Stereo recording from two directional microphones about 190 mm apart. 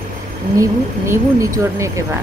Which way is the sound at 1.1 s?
15° right (ahead or behind).